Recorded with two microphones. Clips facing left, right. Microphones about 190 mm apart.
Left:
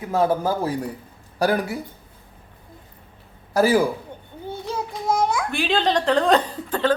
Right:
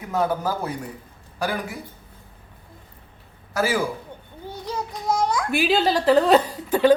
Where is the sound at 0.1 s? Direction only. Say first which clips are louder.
Left 3 dB; 30° left (ahead or behind).